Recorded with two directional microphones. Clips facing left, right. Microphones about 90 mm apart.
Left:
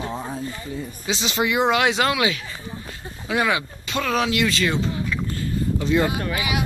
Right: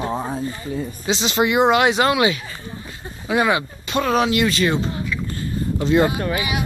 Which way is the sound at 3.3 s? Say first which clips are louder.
Right 3 dB; 20° right (ahead or behind).